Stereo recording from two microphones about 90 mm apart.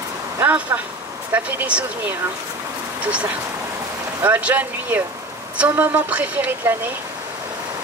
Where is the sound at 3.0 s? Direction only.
15° right (ahead or behind).